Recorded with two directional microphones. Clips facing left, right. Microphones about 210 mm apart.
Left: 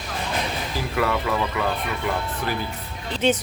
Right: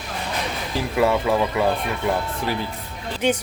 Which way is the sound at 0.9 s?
25° right (ahead or behind).